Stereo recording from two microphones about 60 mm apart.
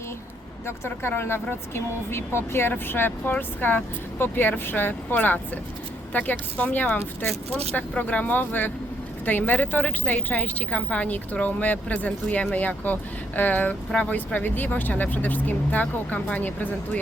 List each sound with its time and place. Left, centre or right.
1.0 s speech: left